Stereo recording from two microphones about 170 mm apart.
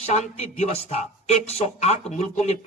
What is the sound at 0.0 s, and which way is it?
Speech, 40° left (ahead or behind).